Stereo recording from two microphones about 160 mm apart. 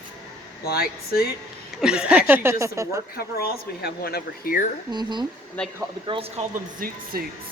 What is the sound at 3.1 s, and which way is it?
Speech, 75° left (ahead or behind).